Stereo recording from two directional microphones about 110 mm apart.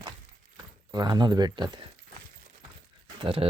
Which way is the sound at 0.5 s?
35° right (ahead or behind).